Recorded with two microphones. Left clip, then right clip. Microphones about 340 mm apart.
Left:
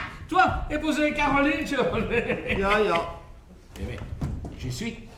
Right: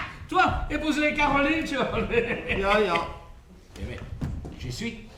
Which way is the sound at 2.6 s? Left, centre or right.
Centre.